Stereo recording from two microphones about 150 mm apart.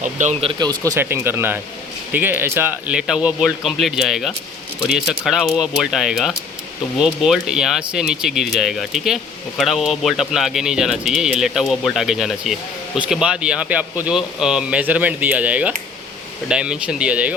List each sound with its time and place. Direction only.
0.0 s speech: 55° right (ahead or behind)
0.4 s speech: 30° right (ahead or behind)
0.9 s speech: 15° right (ahead or behind)